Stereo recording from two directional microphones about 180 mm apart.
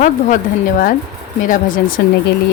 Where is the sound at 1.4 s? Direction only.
50° left (ahead or behind).